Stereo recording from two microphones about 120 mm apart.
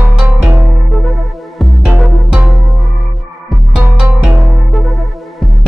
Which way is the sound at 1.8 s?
10° right (ahead or behind).